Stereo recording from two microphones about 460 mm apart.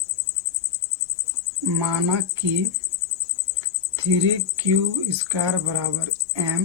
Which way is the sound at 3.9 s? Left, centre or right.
Right.